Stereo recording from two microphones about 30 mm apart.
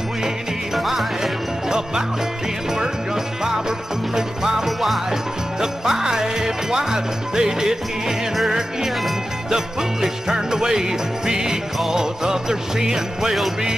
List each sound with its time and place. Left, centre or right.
0.7 s music: centre
4.1 s music: centre
4.6 s music: centre
5.6 s jingle bell: centre
8.5 s music: centre
10.0 s jingle bell: centre